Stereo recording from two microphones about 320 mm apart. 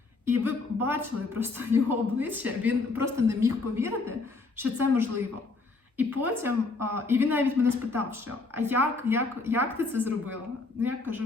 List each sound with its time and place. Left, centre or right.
0.4 s a woman's voice: centre